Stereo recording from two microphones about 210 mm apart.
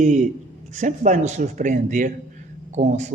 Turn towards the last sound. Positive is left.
turn(degrees=-35)  # may be behind; listen again after turning